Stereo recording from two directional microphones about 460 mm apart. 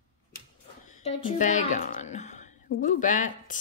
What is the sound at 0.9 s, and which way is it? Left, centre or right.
Speech, centre.